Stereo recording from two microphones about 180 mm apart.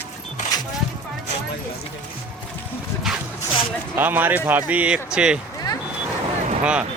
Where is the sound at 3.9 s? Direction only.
10° right (ahead or behind).